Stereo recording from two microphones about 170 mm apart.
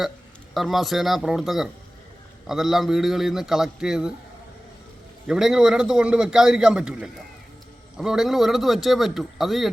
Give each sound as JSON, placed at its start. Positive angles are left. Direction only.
{"t": 0.5, "sound": "a man's voice", "side_deg": 0}
{"t": 5.2, "sound": "a man's voice", "side_deg": -5}